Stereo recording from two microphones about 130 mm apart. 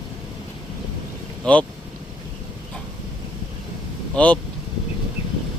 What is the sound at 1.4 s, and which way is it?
Speech, 10° left (ahead or behind).